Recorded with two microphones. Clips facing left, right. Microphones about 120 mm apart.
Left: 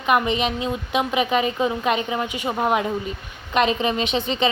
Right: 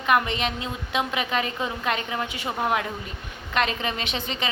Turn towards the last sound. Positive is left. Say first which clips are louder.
# left 8 dB
turn(degrees=20)  # may be behind; listen again after turning